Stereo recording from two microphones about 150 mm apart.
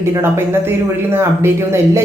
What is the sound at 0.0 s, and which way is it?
Speech, 15° right (ahead or behind).